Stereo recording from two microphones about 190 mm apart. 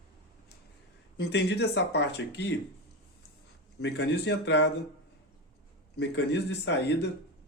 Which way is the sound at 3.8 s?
65° left (ahead or behind).